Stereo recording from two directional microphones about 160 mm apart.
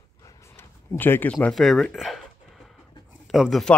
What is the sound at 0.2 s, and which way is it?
Speech, 15° left (ahead or behind).